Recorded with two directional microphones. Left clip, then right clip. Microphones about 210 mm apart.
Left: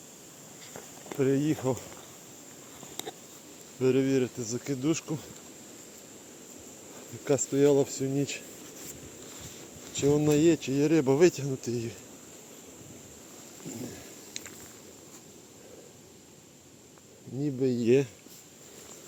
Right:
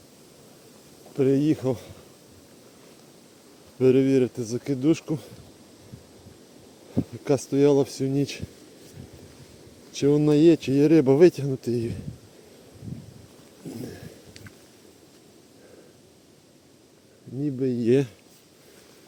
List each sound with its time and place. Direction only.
1.2 s speech: 55° right (ahead or behind)
3.8 s speech: 55° right (ahead or behind)
7.3 s speech: 55° right (ahead or behind)
9.9 s speech: 55° right (ahead or behind)
17.4 s a sound: 40° right (ahead or behind)